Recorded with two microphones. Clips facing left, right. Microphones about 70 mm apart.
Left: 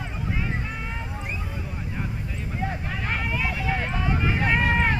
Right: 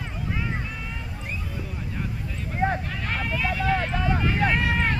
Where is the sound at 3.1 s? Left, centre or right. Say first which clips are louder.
Right 1 dB; centre.